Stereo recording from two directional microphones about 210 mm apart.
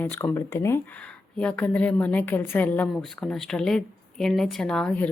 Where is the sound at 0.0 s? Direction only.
10° left (ahead or behind).